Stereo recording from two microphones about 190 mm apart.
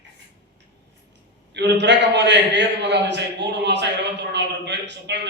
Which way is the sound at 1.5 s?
65° right (ahead or behind).